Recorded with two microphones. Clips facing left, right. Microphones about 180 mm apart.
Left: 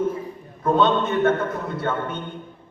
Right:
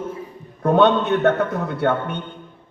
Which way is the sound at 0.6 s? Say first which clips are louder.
Right 3 dB; 65° right (ahead or behind).